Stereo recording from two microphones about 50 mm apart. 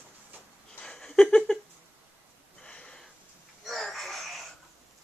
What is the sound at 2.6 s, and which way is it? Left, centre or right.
Sniff, centre.